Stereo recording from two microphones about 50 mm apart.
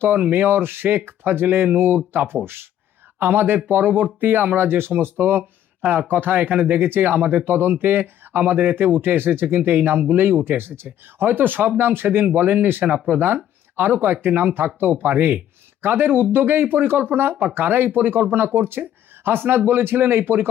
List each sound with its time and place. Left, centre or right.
0.2 s speech: right